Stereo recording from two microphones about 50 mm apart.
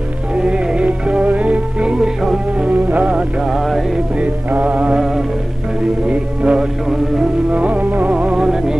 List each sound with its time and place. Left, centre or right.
0.3 s music: right
1.9 s music: centre
2.7 s music: right
3.4 s music: centre
4.6 s music: right
6.0 s music: centre
7.5 s music: right; by 8.7 s centre